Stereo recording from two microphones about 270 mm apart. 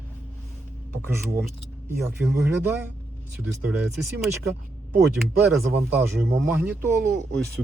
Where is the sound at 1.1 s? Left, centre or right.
Centre.